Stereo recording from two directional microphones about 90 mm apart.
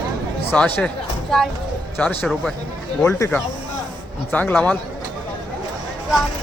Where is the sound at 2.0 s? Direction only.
20° left (ahead or behind).